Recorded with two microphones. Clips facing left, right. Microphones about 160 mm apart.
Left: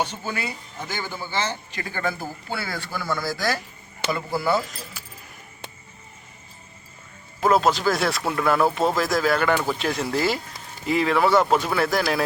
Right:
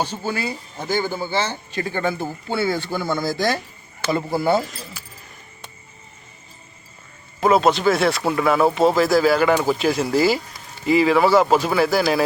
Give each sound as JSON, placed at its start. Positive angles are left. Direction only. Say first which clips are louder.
{"t": 0.0, "sound": "speech", "louder": "right 3 dB", "side_deg": -30}
{"t": 7.4, "sound": "speech", "louder": "right 3 dB", "side_deg": 0}